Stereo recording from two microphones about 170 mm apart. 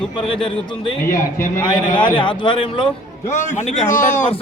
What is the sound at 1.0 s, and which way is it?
Speech, 15° left (ahead or behind).